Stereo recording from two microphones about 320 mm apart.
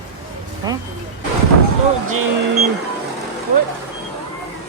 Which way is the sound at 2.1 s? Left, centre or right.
Right.